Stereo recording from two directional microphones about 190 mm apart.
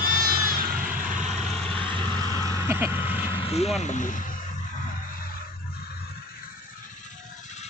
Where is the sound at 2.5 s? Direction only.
10° right (ahead or behind).